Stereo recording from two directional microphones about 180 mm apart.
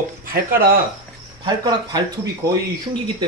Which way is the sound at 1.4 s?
25° right (ahead or behind).